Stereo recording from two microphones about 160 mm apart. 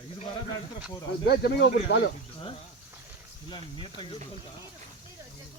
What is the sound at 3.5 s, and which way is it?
Speech, 30° left (ahead or behind).